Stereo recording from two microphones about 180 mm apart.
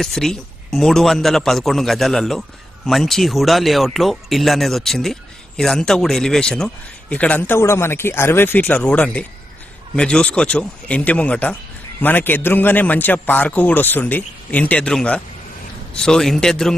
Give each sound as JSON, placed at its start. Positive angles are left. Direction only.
{"t": 0.0, "sound": "a man's voice", "side_deg": 0}